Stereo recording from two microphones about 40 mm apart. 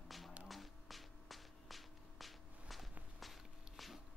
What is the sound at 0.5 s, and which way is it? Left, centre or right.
Music, centre.